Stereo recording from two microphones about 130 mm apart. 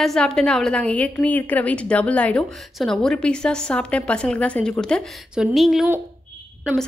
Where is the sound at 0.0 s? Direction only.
5° left (ahead or behind).